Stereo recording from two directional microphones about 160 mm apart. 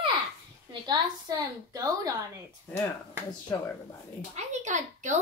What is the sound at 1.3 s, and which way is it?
Speech, 25° right (ahead or behind).